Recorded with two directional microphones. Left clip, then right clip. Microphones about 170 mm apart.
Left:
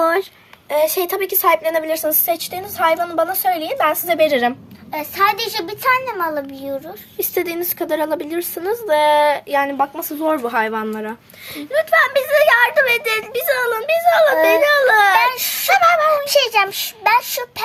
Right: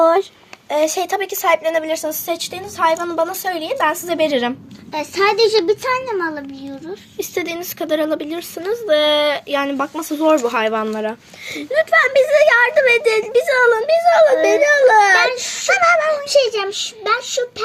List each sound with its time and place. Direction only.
0.0 s a sound: 15° left (ahead or behind)
0.7 s a child's voice: 10° left (ahead or behind)
6.1 s a child's voice: 45° left (ahead or behind)
7.2 s speech: 20° left (ahead or behind)
16.4 s a child's voice: 45° left (ahead or behind)